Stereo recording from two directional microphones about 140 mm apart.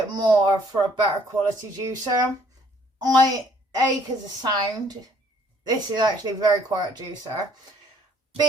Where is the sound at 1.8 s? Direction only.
25° right (ahead or behind).